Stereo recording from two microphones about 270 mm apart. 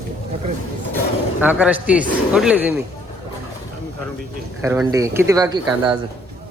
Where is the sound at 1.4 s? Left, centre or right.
Centre.